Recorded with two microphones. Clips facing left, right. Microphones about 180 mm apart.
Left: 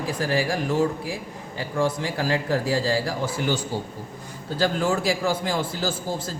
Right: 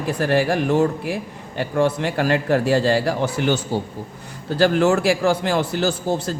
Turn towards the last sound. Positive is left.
turn(degrees=-70)  # may be behind; listen again after turning